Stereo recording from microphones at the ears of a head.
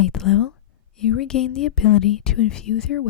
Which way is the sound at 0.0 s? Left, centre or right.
Left.